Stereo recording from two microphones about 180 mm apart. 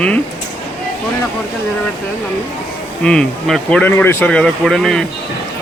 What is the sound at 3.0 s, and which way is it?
Speech, 5° left (ahead or behind).